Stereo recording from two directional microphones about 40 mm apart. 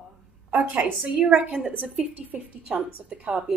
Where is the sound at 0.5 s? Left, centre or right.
Right.